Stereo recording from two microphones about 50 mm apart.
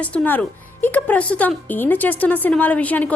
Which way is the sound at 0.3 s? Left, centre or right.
Left.